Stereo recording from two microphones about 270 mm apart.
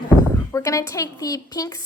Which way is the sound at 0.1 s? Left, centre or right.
Centre.